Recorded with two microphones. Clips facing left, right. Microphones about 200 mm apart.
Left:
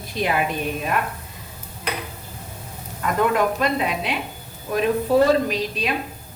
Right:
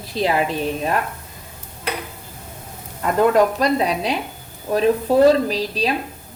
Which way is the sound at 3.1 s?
35° right (ahead or behind).